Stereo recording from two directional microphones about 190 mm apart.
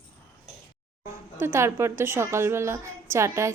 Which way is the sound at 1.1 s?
15° right (ahead or behind).